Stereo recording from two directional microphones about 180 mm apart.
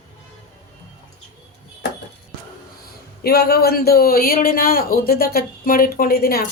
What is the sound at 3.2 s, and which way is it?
A man's voice, 60° left (ahead or behind).